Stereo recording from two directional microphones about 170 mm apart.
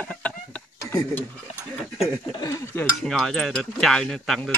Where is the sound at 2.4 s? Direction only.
20° left (ahead or behind).